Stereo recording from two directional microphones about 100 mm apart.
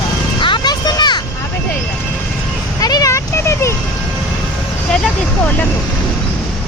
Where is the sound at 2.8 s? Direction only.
35° left (ahead or behind).